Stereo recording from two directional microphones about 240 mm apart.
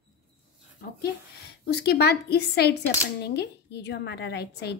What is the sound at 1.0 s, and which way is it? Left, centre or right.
A woman's voice, left.